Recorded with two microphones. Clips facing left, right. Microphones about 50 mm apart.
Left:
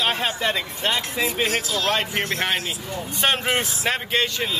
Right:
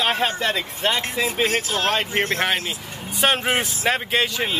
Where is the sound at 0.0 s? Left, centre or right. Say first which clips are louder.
Right 2 dB; centre.